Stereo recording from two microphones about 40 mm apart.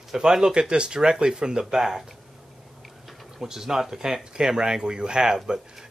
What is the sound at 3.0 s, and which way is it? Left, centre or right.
Speech, centre.